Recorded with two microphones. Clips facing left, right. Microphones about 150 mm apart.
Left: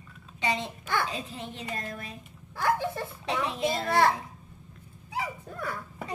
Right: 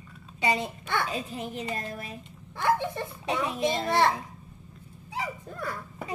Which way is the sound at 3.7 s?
20° right (ahead or behind).